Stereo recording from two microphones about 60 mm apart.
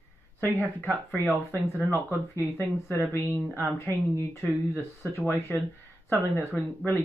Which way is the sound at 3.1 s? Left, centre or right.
Left.